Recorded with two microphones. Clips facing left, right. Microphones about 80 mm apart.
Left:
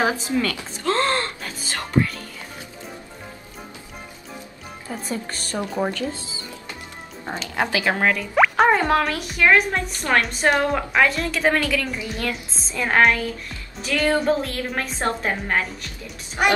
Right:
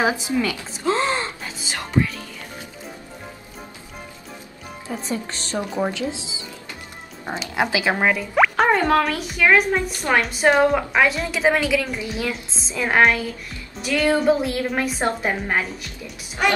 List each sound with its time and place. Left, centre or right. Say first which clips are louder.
0.0 s gasp: right 1 dB; centre
4.8 s speech: right 2 dB; centre
6.1 s speech: right 1 dB; right
7.4 s a woman's voice: right 1 dB; centre
8.4 s a woman's voice: left 1 dB; centre